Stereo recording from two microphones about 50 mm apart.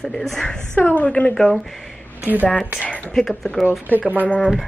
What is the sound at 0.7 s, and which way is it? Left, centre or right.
Speech, left.